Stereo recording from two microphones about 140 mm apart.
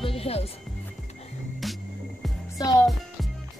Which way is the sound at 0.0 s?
45° left (ahead or behind).